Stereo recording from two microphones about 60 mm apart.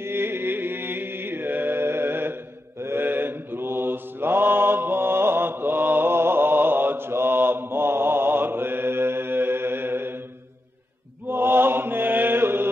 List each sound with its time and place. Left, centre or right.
0.0 s music: right
11.2 s chant: right